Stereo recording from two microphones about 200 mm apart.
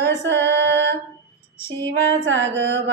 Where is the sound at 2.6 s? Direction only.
55° right (ahead or behind).